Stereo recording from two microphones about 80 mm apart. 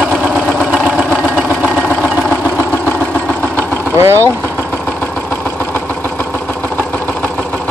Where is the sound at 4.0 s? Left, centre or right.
Right.